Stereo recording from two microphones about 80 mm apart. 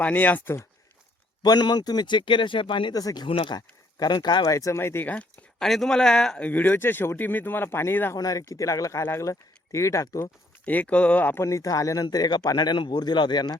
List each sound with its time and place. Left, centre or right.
0.0 s a man's voice: left
1.4 s a man's voice: left
2.9 s speech: left
3.2 s speech: left
4.0 s a man's voice: left
4.4 s speech: left
5.5 s a man's voice: centre; by 8.1 s left
8.1 s speech: left
10.7 s a man's voice: centre
11.4 s speech: left
12.0 s speech: left